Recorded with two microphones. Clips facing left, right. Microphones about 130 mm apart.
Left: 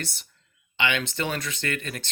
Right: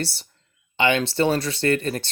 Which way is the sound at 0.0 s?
30° right (ahead or behind).